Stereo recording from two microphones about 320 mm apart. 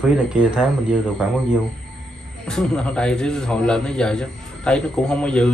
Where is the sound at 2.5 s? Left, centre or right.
Centre.